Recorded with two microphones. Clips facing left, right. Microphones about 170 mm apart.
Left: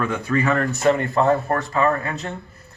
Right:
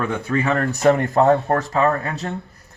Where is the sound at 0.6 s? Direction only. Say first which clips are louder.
Right 2 dB; 40° right (ahead or behind).